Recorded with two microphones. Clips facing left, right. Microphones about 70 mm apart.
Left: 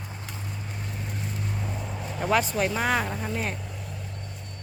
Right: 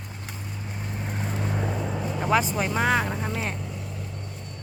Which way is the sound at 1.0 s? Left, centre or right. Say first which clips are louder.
Right 5 dB; right.